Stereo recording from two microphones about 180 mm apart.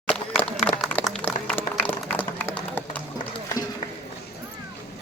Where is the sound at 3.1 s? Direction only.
20° left (ahead or behind).